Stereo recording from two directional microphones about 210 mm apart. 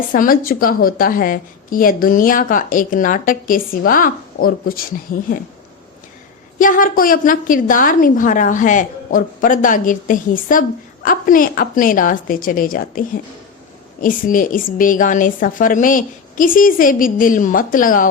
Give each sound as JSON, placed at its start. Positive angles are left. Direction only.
{"t": 0.1, "sound": "a woman's voice", "side_deg": 40}
{"t": 6.6, "sound": "a woman's voice", "side_deg": 40}